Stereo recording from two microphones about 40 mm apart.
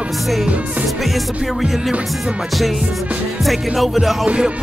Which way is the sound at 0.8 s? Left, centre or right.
Centre.